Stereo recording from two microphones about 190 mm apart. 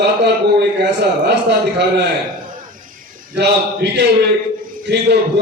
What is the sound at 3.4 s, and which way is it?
A man's voice, 60° right (ahead or behind).